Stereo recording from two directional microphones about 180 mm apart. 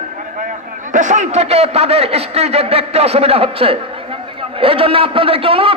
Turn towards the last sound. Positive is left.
turn(degrees=-30)  # may be behind; listen again after turning